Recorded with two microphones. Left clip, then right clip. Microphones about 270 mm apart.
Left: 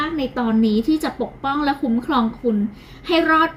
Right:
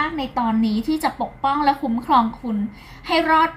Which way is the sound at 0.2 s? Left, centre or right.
Right.